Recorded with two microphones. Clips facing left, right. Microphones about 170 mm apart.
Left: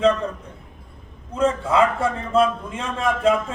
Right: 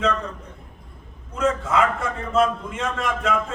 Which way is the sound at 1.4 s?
30° left (ahead or behind).